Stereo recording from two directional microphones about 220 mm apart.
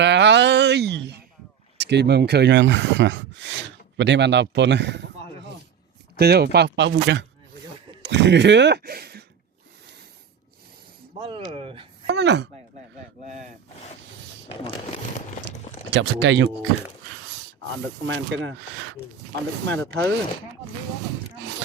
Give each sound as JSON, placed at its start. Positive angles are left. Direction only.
{"t": 0.0, "sound": "a sound", "side_deg": -55}
{"t": 1.8, "sound": "speech", "side_deg": -50}
{"t": 6.1, "sound": "speech", "side_deg": -45}
{"t": 11.2, "sound": "speech", "side_deg": -25}
{"t": 12.0, "sound": "speech", "side_deg": -50}
{"t": 13.2, "sound": "speech", "side_deg": -35}
{"t": 14.5, "sound": "crumpling", "side_deg": 25}
{"t": 15.9, "sound": "speech", "side_deg": -55}
{"t": 18.0, "sound": "speech", "side_deg": -60}
{"t": 19.6, "sound": "speech", "side_deg": 10}